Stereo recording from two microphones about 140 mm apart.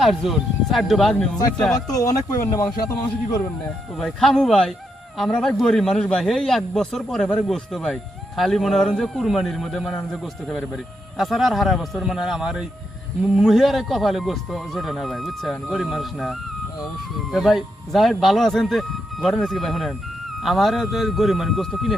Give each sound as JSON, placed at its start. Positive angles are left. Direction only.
{"t": 0.0, "sound": "speech", "side_deg": 0}
{"t": 1.7, "sound": "speech", "side_deg": 25}
{"t": 3.9, "sound": "speech", "side_deg": 5}